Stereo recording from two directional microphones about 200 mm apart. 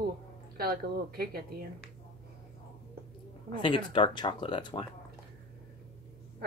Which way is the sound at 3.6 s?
25° left (ahead or behind).